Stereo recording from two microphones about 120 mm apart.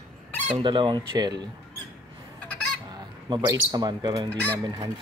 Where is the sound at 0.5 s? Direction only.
40° right (ahead or behind).